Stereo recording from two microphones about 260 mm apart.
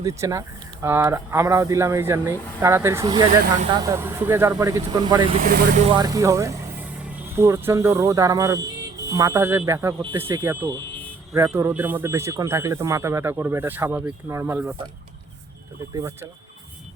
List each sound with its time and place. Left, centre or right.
0.0 s speech: centre
5.4 s speech: right
6.0 s speech: centre
16.0 s speech: centre